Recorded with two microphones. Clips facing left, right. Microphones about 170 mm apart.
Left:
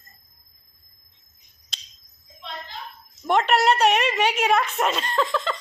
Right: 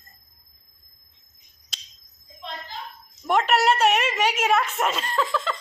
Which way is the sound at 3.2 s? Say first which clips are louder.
Left 1 dB; 5° right (ahead or behind).